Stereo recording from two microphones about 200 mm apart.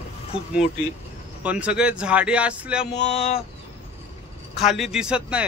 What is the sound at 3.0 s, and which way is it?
Speech, 30° left (ahead or behind).